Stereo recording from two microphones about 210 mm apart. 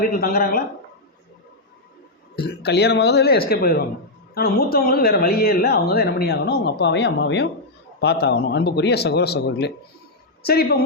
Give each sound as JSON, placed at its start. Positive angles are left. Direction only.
{"t": 0.0, "sound": "speech", "side_deg": 45}
{"t": 2.3, "sound": "speech", "side_deg": 50}